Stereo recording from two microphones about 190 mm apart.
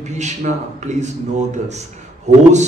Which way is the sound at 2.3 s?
40° right (ahead or behind).